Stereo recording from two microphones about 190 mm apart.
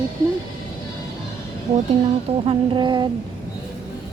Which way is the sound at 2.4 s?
30° right (ahead or behind).